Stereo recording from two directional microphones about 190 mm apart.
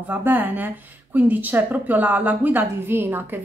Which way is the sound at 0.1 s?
10° right (ahead or behind).